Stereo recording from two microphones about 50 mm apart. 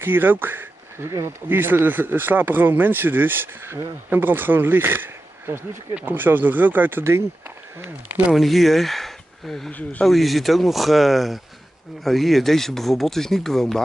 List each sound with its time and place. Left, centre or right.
0.0 s speech: right
7.0 s speech: right
8.3 s speech: centre
9.7 s speech: left
10.0 s speech: centre